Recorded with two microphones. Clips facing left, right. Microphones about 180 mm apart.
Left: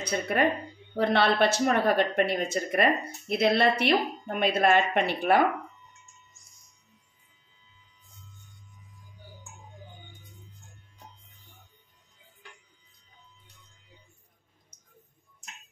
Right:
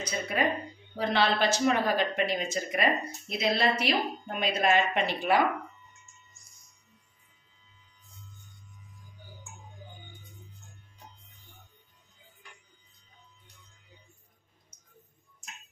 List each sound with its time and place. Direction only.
0.1 s speech: 55° left (ahead or behind)